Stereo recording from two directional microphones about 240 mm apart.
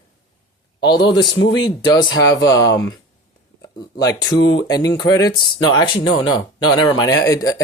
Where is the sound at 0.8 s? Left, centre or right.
Centre.